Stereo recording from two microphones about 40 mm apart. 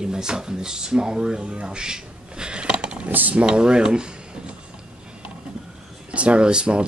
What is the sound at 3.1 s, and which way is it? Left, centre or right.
Speech, right.